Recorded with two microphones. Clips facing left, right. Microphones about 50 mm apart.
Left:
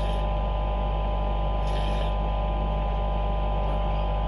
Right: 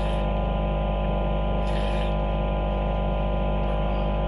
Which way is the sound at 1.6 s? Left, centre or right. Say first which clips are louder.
Right 2 dB; centre.